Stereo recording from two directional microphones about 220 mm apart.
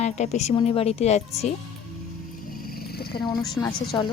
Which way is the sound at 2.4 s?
40° left (ahead or behind).